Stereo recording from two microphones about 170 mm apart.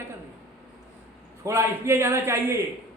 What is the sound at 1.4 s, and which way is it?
A man's voice, 15° right (ahead or behind).